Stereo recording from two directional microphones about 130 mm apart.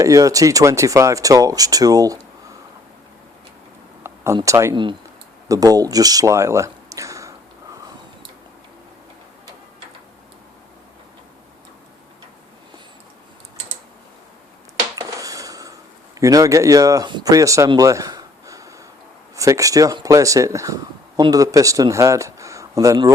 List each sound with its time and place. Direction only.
0.0 s speech: 25° right (ahead or behind)
4.0 s a sound: 20° right (ahead or behind)
4.4 s speech: 25° right (ahead or behind)
14.9 s dishes: 25° right (ahead or behind)
16.2 s speech: 25° right (ahead or behind)
17.7 s a sound: 25° right (ahead or behind)
19.4 s speech: 25° right (ahead or behind)